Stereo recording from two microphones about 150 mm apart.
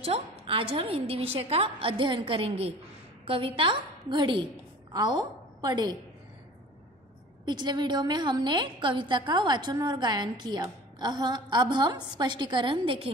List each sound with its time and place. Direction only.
0.0 s a woman's voice: 35° right (ahead or behind)
7.4 s a woman's voice: 30° right (ahead or behind)